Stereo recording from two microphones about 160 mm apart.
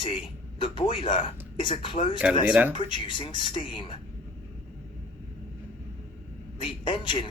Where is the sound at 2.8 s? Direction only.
30° left (ahead or behind).